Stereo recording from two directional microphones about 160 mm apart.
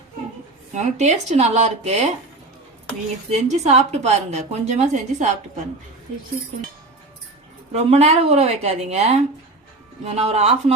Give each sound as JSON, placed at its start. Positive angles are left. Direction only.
{"t": 0.7, "sound": "a woman's voice", "side_deg": -50}
{"t": 3.2, "sound": "a woman's voice", "side_deg": -45}
{"t": 7.7, "sound": "a woman's voice", "side_deg": -40}
{"t": 10.2, "sound": "a woman's voice", "side_deg": -40}